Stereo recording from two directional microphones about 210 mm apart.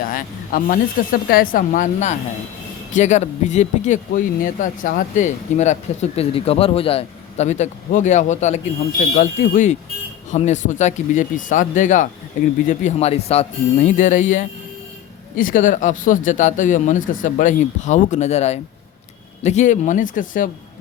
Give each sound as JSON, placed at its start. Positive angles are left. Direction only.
{"t": 0.0, "sound": "speech", "side_deg": 40}